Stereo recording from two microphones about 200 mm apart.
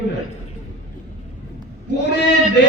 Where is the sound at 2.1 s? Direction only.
60° left (ahead or behind).